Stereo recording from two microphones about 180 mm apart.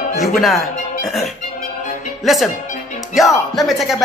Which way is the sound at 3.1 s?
Centre (ahead or behind).